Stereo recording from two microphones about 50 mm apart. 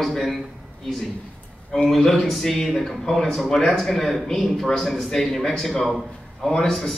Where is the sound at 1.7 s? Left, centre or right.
Centre.